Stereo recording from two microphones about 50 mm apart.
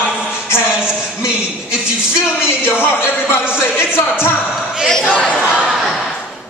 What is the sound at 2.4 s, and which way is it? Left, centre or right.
Speech, left.